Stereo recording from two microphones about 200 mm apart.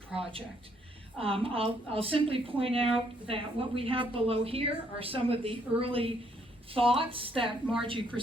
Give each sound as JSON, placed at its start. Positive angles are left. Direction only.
{"t": 1.2, "sound": "a woman's voice", "side_deg": -25}